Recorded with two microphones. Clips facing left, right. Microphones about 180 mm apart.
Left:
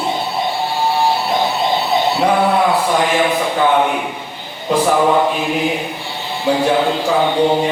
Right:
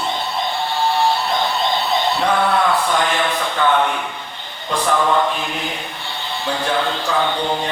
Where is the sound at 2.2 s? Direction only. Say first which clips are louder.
Left 3 dB; 10° left (ahead or behind).